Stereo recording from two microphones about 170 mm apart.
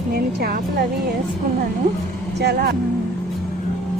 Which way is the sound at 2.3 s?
75° right (ahead or behind).